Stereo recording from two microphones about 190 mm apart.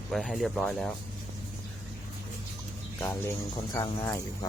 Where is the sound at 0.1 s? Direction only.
Centre (ahead or behind).